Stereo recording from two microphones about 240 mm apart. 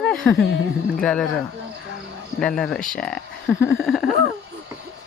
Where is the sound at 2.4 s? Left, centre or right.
Centre.